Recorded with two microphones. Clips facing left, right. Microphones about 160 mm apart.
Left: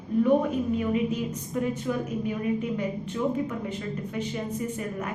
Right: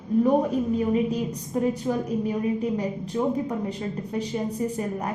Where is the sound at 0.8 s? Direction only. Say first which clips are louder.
Right 3 dB; 35° right (ahead or behind).